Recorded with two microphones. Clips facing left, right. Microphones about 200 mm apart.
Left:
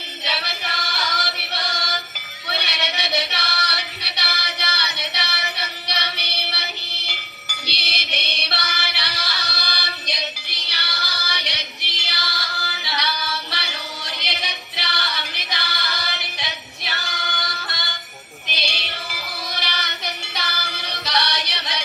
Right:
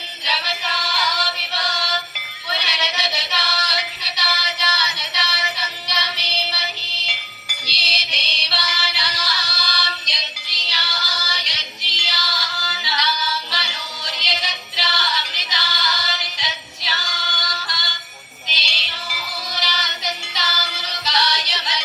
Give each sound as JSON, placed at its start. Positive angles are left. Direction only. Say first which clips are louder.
{"t": 0.3, "sound": "music", "louder": "right 2 dB", "side_deg": 60}
{"t": 2.5, "sound": "music", "louder": "even", "side_deg": 60}
{"t": 18.4, "sound": "a sound", "louder": "left 4 dB", "side_deg": 55}
{"t": 19.5, "sound": "music", "louder": "right 2 dB", "side_deg": 60}